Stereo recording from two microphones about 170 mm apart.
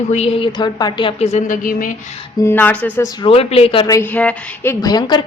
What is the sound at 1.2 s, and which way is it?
Speech, 40° left (ahead or behind).